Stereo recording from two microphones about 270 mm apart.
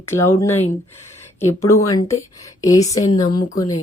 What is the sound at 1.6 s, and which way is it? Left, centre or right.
Speech, centre.